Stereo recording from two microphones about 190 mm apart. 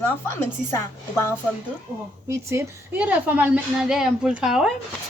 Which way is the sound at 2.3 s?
15° right (ahead or behind).